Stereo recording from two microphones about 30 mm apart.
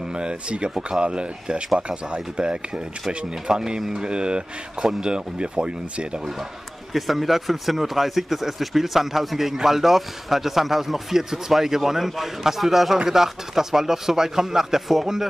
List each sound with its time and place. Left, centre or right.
0.1 s speech: right
6.9 s speech: centre